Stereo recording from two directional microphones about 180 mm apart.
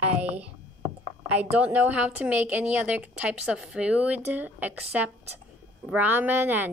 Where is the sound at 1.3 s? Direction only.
10° right (ahead or behind).